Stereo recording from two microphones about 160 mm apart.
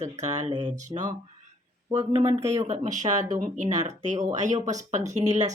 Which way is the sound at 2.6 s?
50° right (ahead or behind).